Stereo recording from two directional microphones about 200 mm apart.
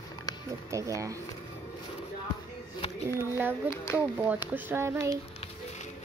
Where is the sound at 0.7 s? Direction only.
15° right (ahead or behind).